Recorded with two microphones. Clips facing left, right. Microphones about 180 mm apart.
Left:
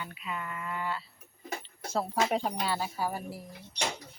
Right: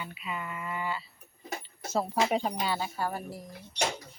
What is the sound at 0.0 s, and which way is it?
Speech, 5° right (ahead or behind).